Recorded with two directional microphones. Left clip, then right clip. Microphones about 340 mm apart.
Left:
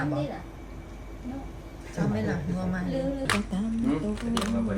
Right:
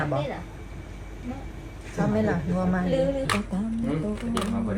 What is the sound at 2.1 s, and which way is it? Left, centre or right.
Speech, centre.